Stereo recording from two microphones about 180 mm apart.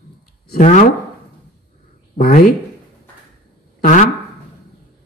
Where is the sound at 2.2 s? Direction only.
55° left (ahead or behind).